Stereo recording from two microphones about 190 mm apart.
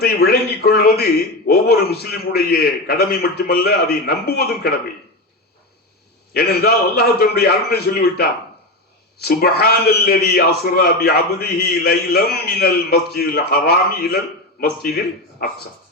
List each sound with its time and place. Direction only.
0.0 s a sound: 55° left (ahead or behind)
1.5 s a man's voice: 55° left (ahead or behind)
6.3 s a man's voice: 55° left (ahead or behind)
9.2 s a man's voice: 55° left (ahead or behind)